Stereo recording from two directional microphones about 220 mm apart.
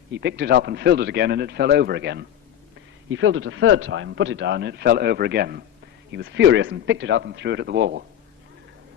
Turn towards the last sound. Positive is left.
turn(degrees=-50)  # may be behind; listen again after turning